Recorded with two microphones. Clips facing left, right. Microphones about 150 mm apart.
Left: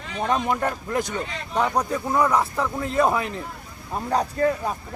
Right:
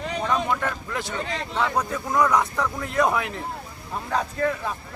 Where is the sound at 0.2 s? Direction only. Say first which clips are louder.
Left 3 dB; 45° left (ahead or behind).